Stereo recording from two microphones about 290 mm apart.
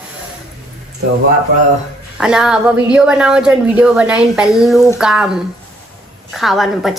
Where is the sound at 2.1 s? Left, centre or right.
Centre.